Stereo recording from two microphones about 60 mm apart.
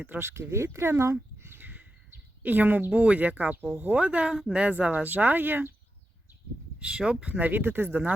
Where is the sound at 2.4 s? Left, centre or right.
Right.